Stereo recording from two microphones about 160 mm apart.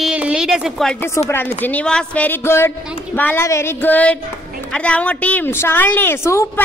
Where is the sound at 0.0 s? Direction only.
5° right (ahead or behind).